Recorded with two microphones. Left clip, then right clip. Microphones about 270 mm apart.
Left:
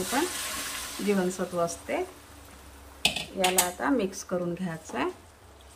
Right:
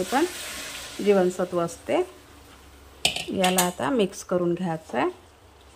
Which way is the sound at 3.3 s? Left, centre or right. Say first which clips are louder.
Right 3 dB; right.